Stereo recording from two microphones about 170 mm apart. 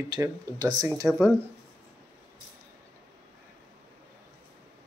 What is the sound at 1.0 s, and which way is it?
Speech, centre (ahead or behind).